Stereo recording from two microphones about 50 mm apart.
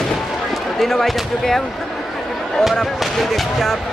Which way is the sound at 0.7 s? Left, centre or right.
Centre.